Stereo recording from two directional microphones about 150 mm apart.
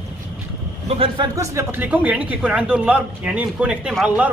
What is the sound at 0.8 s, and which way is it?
Speech, 40° right (ahead or behind).